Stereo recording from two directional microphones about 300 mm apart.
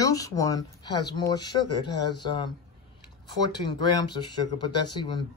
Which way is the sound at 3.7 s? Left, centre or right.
Centre.